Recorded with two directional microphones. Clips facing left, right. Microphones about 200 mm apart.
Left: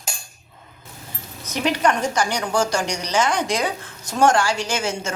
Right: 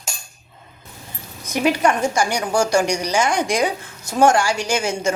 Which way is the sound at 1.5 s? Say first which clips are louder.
Right 2 dB; 10° right (ahead or behind).